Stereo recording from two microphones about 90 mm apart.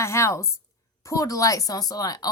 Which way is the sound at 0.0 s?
30° left (ahead or behind).